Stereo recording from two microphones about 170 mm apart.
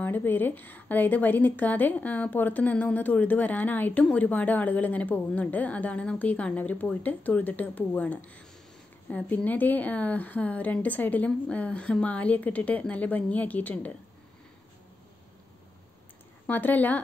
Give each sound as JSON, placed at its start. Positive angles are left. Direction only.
{"t": 0.0, "sound": "a woman's voice", "side_deg": 10}
{"t": 16.4, "sound": "a woman's voice", "side_deg": 10}